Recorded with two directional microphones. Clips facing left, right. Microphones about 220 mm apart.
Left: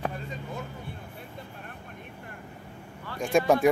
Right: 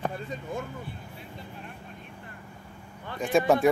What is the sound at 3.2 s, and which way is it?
Speech, centre (ahead or behind).